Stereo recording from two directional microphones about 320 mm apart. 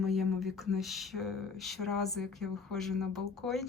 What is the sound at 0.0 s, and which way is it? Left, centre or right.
Speech, centre.